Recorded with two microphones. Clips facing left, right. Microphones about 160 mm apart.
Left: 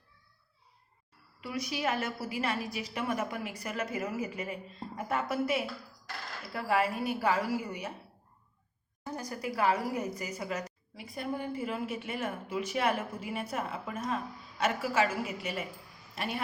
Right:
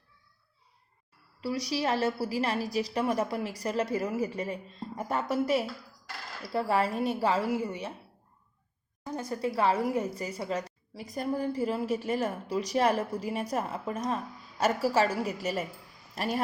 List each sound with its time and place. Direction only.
1.4 s a woman's voice: 35° right (ahead or behind)
9.0 s a woman's voice: 25° right (ahead or behind)